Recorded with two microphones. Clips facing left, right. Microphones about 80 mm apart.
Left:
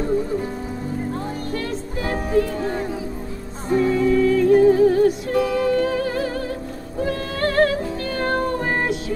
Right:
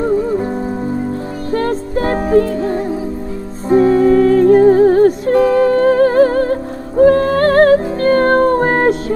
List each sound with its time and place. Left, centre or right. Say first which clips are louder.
1.5 s music: right 10 dB; right